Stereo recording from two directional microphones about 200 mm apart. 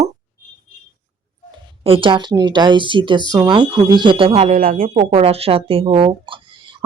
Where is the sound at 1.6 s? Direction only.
25° right (ahead or behind).